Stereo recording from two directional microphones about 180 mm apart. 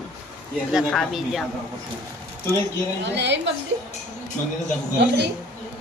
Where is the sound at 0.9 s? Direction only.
Centre (ahead or behind).